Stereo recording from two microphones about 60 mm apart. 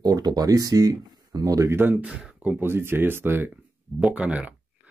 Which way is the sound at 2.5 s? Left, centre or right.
Right.